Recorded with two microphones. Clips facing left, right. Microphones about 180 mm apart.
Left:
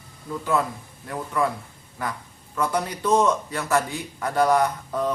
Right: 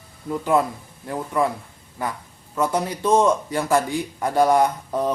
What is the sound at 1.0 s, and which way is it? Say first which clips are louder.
Speech: right 3 dB; 25° right (ahead or behind).